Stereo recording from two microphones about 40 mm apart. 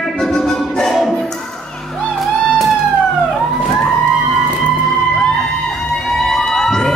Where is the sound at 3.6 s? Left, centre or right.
Left.